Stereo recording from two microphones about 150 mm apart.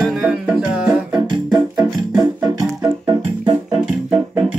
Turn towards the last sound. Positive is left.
turn(degrees=-30)  # may be behind; listen again after turning